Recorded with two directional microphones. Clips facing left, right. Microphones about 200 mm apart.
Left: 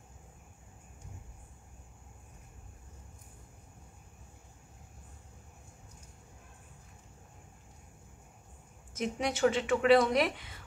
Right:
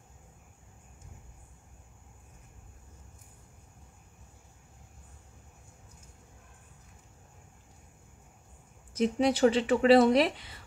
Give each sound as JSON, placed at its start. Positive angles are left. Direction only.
{"t": 8.9, "sound": "speech", "side_deg": -30}